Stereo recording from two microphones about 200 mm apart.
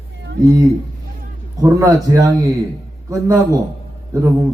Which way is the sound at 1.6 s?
15° right (ahead or behind).